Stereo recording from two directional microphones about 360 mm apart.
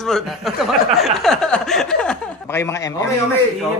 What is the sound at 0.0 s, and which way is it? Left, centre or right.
Chuckle, centre.